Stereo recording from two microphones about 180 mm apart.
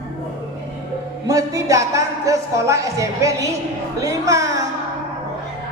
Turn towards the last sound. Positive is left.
turn(degrees=-15)  # may be behind; listen again after turning